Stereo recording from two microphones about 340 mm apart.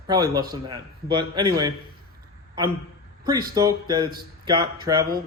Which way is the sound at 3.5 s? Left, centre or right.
Centre.